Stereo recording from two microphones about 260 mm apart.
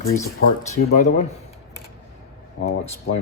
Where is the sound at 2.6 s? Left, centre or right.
Left.